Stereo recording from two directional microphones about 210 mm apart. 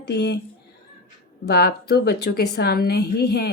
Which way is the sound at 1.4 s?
50° left (ahead or behind).